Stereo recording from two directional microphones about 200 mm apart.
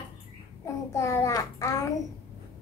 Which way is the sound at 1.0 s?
15° left (ahead or behind).